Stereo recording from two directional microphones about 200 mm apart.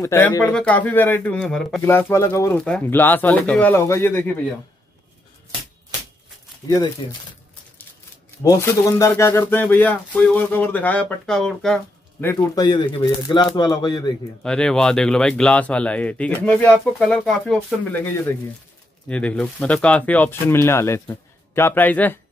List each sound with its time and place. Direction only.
0.0 s speech: 10° left (ahead or behind)
6.7 s speech: 20° left (ahead or behind)
8.5 s speech: 15° left (ahead or behind)
12.3 s speech: 15° left (ahead or behind)
14.4 s speech: 5° left (ahead or behind)